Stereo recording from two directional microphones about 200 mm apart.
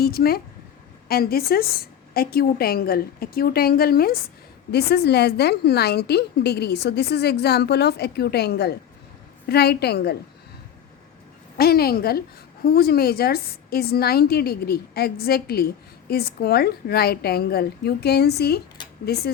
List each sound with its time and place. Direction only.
0.0 s a woman's voice: 50° left (ahead or behind)
11.5 s a woman's voice: 50° left (ahead or behind)